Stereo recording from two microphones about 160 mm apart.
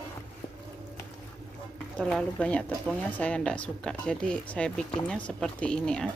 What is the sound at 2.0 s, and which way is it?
Speech, 5° left (ahead or behind).